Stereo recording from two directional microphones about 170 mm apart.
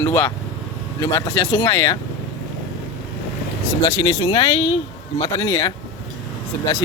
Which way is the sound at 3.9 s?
25° left (ahead or behind).